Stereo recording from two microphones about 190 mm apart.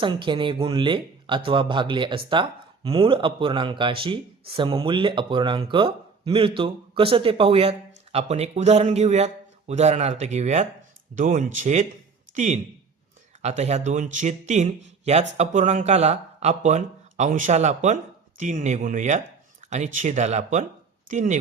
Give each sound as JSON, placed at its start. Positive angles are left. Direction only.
{"t": 0.0, "sound": "speech", "side_deg": -25}